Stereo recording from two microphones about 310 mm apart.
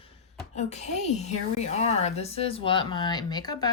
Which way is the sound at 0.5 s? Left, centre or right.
Left.